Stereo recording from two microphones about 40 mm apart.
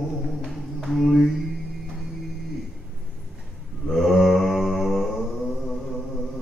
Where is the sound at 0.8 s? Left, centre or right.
Centre.